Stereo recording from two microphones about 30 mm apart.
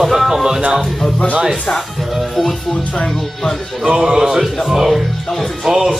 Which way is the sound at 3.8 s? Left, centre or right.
Right.